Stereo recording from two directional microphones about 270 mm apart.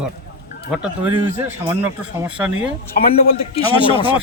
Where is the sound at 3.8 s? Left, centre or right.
Centre.